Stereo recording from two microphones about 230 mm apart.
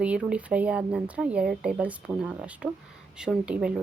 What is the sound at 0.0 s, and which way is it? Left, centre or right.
A woman's voice, centre.